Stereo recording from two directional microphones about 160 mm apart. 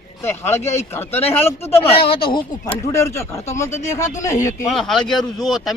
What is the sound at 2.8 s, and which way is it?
Speech, 20° left (ahead or behind).